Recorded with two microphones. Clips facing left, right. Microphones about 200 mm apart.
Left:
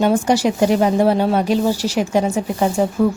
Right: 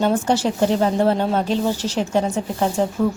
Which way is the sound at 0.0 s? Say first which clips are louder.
Left 3 dB; 10° left (ahead or behind).